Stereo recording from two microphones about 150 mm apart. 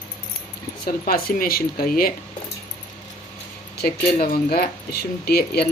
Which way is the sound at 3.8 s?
80° left.